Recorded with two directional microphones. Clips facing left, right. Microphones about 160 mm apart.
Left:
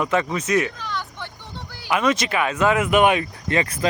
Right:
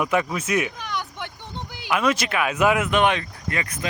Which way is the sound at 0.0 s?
10° right (ahead or behind).